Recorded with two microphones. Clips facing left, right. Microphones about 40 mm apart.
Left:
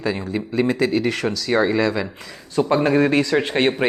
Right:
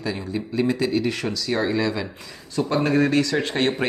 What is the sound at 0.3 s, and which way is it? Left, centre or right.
Speech, left.